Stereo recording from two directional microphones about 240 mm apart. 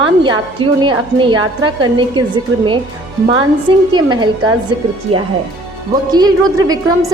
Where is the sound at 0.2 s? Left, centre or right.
Centre.